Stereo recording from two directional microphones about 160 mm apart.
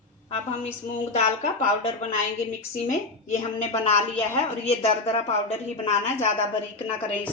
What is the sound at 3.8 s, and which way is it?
A woman's voice, 40° left (ahead or behind).